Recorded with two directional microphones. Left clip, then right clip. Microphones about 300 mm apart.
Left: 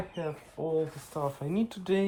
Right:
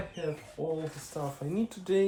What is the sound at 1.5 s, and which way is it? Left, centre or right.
Speech, left.